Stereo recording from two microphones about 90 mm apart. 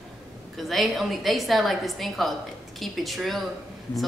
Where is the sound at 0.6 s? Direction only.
Centre (ahead or behind).